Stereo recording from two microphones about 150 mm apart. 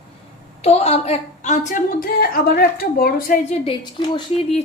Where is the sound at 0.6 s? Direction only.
45° left (ahead or behind); by 3.3 s 80° left.